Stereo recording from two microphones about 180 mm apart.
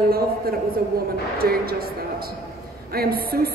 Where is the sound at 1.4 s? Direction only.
55° right (ahead or behind).